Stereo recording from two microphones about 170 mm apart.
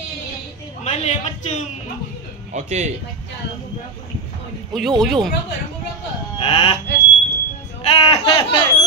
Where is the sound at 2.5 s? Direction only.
40° right (ahead or behind).